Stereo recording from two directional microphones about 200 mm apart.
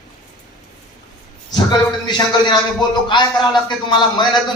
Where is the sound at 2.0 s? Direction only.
20° left (ahead or behind).